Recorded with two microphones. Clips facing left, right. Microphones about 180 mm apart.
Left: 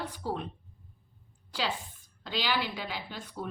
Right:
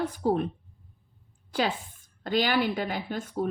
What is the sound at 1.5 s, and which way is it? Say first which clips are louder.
A woman's voice: right 6 dB; 50° right (ahead or behind).